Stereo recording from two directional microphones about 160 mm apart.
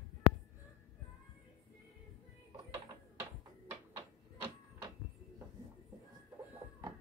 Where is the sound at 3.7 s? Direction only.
15° right (ahead or behind).